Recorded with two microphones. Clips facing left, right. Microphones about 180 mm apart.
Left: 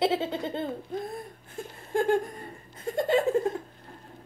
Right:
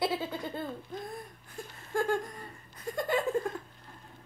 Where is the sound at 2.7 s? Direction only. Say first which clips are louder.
Left 6 dB; 25° left (ahead or behind).